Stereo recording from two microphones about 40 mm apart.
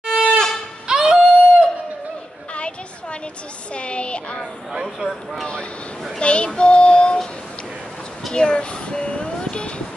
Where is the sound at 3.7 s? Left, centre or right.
Left.